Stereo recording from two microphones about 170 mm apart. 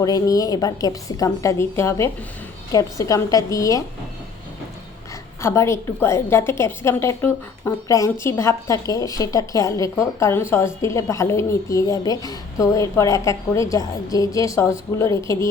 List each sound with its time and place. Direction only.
0.0 s a woman's voice: 20° left (ahead or behind)
5.4 s a woman's voice: 15° left (ahead or behind)